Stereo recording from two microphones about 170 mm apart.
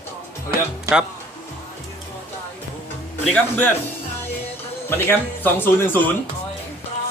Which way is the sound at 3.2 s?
10° left (ahead or behind).